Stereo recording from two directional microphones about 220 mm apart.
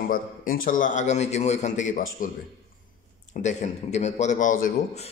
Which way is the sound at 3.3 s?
30° left (ahead or behind).